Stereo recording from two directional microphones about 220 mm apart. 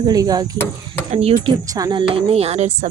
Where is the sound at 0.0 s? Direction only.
15° right (ahead or behind).